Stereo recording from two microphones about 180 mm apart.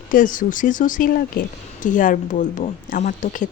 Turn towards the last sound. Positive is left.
turn(degrees=45)  # may be behind; listen again after turning